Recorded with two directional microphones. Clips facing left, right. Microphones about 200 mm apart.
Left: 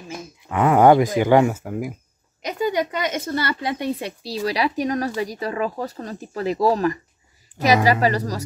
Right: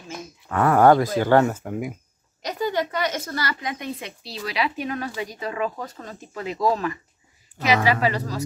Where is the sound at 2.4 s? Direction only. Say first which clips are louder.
Left 3 dB; 15° left (ahead or behind).